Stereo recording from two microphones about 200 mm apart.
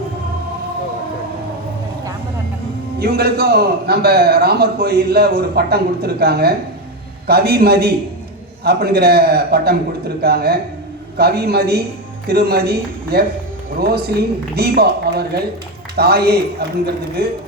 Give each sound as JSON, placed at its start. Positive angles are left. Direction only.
{"t": 3.0, "sound": "a man's voice", "side_deg": -50}